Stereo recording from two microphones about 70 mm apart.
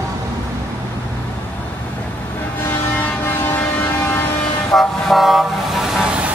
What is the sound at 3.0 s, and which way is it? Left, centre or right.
Train, left.